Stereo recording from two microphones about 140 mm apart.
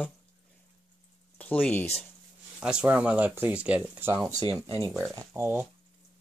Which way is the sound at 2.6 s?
5° right (ahead or behind).